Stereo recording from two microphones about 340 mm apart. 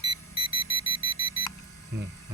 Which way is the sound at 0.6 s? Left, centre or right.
Left.